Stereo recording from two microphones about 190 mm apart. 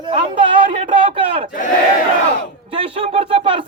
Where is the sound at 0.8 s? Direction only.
25° right (ahead or behind).